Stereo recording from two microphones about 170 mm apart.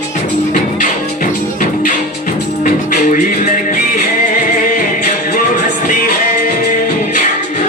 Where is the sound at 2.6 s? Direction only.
50° left (ahead or behind).